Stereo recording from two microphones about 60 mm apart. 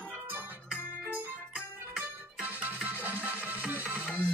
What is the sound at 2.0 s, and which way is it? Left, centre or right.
Music, right.